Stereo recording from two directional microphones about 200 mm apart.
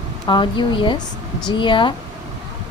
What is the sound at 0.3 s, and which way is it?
Speech, 25° left (ahead or behind).